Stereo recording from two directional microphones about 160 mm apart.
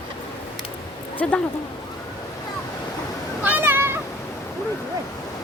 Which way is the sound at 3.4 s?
10° right (ahead or behind).